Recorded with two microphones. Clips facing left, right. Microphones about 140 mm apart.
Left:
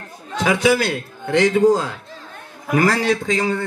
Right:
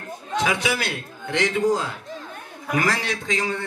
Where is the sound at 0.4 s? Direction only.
45° left (ahead or behind).